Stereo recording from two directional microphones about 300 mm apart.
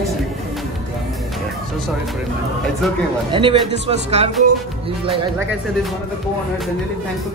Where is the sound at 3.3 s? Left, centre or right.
Centre.